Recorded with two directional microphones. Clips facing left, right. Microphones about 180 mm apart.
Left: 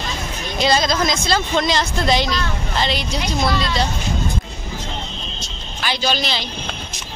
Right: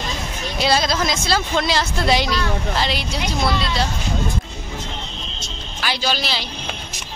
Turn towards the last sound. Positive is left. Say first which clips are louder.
# left 2 dB
turn(degrees=-5)  # may be behind; listen again after turning